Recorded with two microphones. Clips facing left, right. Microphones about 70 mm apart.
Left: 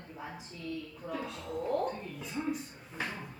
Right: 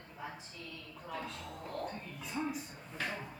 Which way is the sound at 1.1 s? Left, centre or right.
Centre.